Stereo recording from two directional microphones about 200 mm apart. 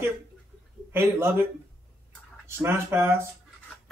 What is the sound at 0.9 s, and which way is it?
Speech, 10° right (ahead or behind).